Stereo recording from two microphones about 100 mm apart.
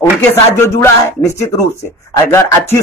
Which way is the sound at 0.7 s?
30° left (ahead or behind).